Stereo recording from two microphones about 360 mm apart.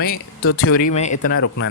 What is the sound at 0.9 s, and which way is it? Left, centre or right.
Speech, centre.